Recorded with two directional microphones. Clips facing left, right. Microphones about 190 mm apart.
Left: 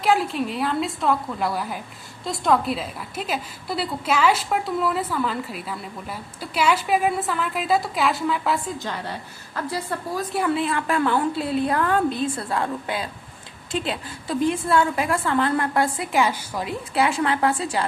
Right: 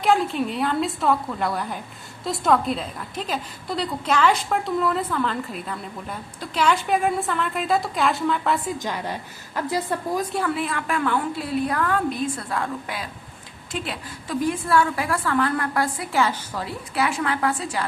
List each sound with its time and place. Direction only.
0.0 s a woman's voice: centre (ahead or behind)
8.8 s a woman's voice: 15° right (ahead or behind)
10.5 s a woman's voice: 30° left (ahead or behind); by 16.7 s 10° left (ahead or behind)
16.9 s a woman's voice: 25° left (ahead or behind)